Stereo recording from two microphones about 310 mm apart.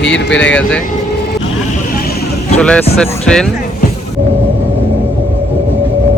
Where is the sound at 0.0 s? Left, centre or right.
Left.